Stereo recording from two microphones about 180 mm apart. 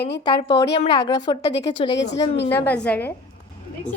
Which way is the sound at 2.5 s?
10° left (ahead or behind).